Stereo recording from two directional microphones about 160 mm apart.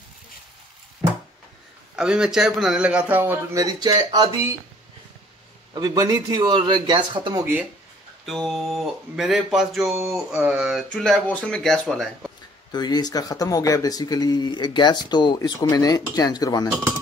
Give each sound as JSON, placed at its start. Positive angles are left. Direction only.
{"t": 2.0, "sound": "a man's voice", "side_deg": -5}
{"t": 5.8, "sound": "speech", "side_deg": -25}
{"t": 8.3, "sound": "speech", "side_deg": 0}
{"t": 12.7, "sound": "speech", "side_deg": 25}